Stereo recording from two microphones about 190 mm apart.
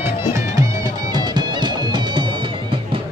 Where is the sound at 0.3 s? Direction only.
20° right (ahead or behind).